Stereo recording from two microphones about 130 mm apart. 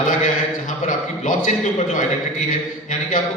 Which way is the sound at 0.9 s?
85° left.